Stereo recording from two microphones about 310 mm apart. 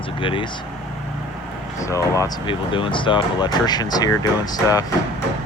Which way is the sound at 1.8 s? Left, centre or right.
Centre.